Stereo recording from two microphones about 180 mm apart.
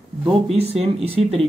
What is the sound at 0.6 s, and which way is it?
Speech, 35° right (ahead or behind).